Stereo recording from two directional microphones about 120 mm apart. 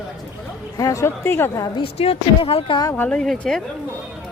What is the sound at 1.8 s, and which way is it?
Speech, 50° left (ahead or behind).